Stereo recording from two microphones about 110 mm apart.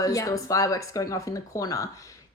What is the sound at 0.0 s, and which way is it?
Speech, 30° left (ahead or behind).